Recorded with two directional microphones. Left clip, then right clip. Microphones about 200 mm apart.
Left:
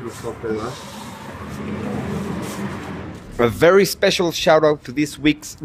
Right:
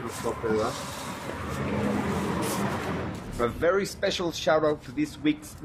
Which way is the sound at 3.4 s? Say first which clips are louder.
Left 11 dB; 40° left (ahead or behind).